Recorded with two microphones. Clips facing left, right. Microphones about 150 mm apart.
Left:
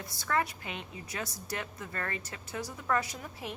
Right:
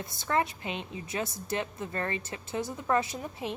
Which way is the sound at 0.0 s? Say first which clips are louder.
Right 3 dB; 25° right (ahead or behind).